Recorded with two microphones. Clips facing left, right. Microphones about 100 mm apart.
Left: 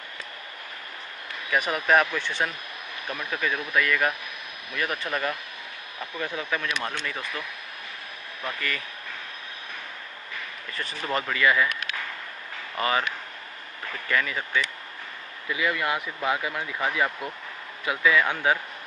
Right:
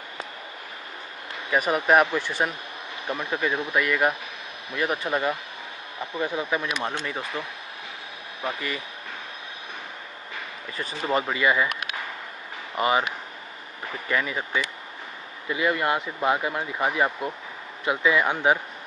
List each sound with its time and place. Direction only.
1.7 s speech: 15° right (ahead or behind)
3.1 s speech: 20° right (ahead or behind)
10.9 s speech: 15° right (ahead or behind)